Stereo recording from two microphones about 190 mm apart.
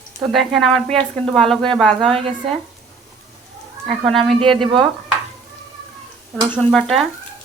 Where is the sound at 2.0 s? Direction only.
30° right (ahead or behind).